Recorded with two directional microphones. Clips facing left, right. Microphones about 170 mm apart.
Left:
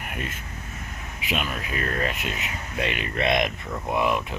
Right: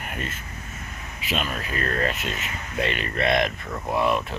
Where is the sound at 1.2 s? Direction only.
15° left (ahead or behind).